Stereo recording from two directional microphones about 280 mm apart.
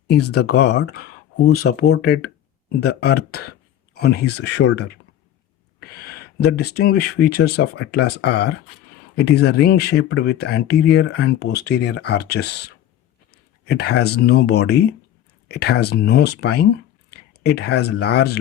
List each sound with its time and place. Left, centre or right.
0.1 s speech: left
5.9 s speech: left
13.3 s a sound: left
14.0 s speech: left